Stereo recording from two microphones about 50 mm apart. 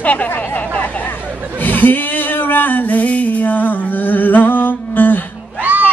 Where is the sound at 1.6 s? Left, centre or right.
Left.